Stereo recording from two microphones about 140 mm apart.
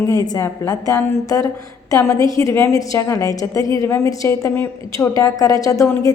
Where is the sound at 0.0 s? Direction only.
25° left (ahead or behind).